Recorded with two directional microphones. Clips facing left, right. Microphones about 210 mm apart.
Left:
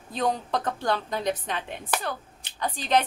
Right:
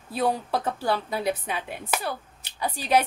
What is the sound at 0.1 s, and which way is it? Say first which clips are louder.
A woman's voice: right 1 dB; 10° right (ahead or behind).